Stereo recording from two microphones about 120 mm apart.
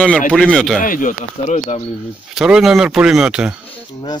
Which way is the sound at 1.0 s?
70° left (ahead or behind).